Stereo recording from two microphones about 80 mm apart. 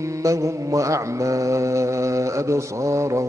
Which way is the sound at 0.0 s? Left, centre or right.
Right.